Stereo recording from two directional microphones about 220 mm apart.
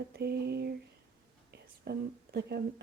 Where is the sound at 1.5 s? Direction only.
50° right (ahead or behind).